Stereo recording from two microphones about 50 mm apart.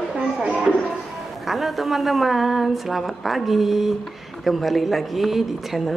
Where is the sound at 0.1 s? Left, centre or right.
Centre.